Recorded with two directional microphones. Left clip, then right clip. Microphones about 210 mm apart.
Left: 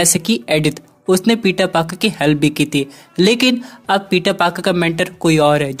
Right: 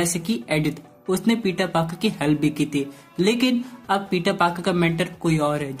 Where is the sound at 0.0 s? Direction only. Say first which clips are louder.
Left 9 dB; 40° left (ahead or behind).